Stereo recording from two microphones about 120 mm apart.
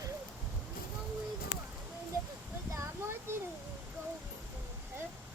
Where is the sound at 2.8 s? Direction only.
20° right (ahead or behind).